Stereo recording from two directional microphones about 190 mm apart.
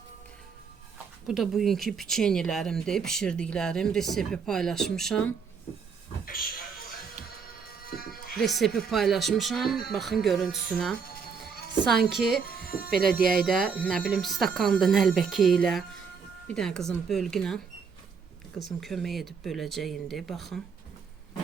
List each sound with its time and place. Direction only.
1.3 s speech: centre (ahead or behind)
6.2 s a sound: 50° left (ahead or behind)
7.9 s music: 50° left (ahead or behind)
8.4 s speech: centre (ahead or behind)
12.6 s electric shaver: 55° left (ahead or behind)
13.2 s speech: centre (ahead or behind)
18.8 s speech: centre (ahead or behind)